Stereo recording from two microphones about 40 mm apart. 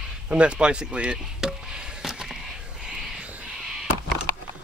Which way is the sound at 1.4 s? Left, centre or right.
Centre.